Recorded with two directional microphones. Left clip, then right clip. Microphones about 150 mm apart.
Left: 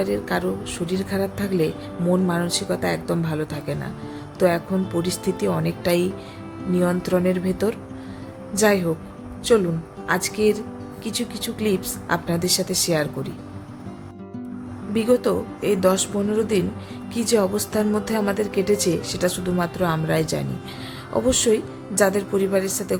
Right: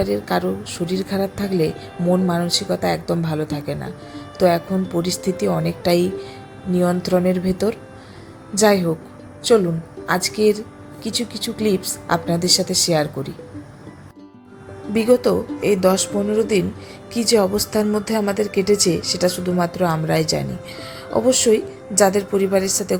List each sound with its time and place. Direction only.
0.0 s a woman's voice: 10° right (ahead or behind)
14.9 s a woman's voice: 15° right (ahead or behind)